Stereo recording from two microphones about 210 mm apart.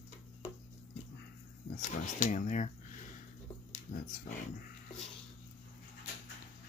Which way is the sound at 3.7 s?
40° left (ahead or behind).